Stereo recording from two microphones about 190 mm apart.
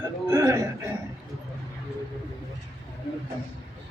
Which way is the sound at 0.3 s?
15° right (ahead or behind).